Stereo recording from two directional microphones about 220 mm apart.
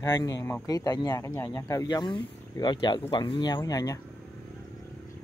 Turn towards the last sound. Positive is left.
turn(degrees=15)  # may be behind; listen again after turning